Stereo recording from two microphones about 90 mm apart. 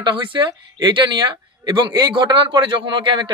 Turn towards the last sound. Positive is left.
turn(degrees=-65)  # may be behind; listen again after turning